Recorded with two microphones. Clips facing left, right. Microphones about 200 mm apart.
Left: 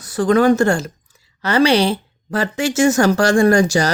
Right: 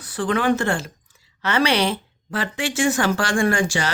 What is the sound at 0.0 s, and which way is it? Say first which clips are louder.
Speech: left 8 dB; 40° left (ahead or behind).